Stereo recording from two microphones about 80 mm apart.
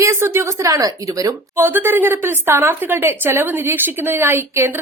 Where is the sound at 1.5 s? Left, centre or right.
Right.